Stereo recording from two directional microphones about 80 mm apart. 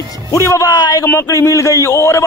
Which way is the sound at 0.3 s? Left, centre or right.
Left.